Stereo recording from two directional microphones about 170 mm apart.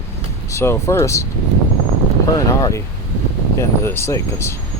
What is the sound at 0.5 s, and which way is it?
Speech, 15° left (ahead or behind).